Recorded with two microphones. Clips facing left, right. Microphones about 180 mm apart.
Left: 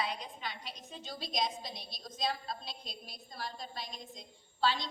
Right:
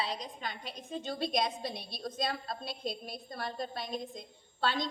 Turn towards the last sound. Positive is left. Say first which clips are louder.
# even
turn(degrees=-55)  # may be behind; listen again after turning